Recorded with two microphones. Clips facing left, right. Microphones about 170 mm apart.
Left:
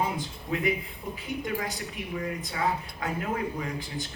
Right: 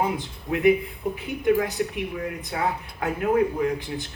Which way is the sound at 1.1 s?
60° right (ahead or behind).